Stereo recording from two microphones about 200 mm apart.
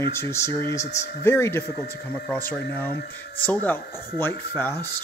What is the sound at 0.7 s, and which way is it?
Speech, 35° left (ahead or behind).